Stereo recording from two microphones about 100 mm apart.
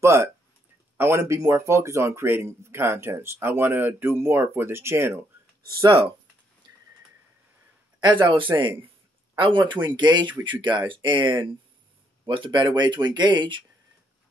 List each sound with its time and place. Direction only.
0.0 s speech: 30° right (ahead or behind)
5.9 s speech: 60° right (ahead or behind)
6.6 s a sound: 50° right (ahead or behind)
8.0 s speech: 50° right (ahead or behind)